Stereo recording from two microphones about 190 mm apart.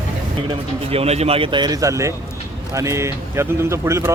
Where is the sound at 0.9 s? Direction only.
35° right (ahead or behind).